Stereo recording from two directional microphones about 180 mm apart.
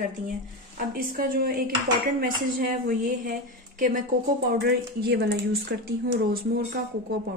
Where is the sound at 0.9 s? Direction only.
60° right (ahead or behind).